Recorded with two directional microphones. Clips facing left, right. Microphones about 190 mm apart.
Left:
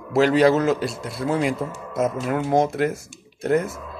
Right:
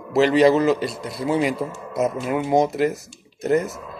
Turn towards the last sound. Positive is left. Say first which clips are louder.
# right 1 dB
turn(degrees=0)  # may be behind; listen again after turning